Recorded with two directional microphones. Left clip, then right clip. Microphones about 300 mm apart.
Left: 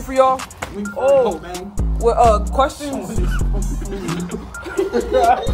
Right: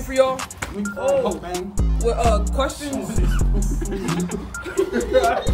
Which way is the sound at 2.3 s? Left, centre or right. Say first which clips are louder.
Left 6 dB; centre.